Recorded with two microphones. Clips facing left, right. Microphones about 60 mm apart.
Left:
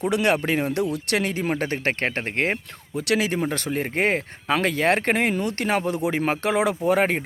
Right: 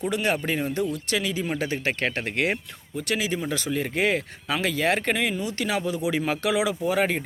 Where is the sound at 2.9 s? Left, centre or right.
Left.